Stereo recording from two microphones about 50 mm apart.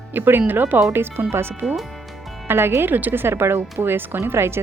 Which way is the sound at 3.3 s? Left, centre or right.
Right.